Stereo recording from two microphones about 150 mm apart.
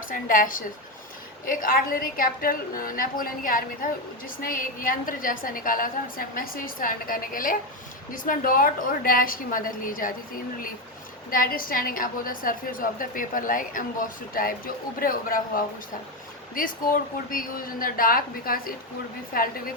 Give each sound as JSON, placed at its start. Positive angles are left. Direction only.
{"t": 0.1, "sound": "a woman's voice", "side_deg": 65}